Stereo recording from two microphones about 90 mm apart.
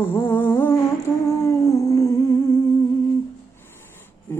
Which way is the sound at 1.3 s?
35° left (ahead or behind).